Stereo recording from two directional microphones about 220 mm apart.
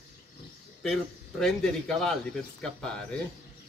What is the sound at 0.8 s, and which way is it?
A man's voice, centre (ahead or behind).